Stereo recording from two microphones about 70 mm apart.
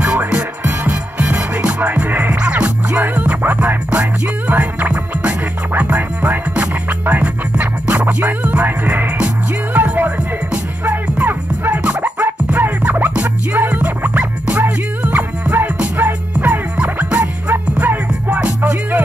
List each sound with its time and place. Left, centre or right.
0.0 s music: centre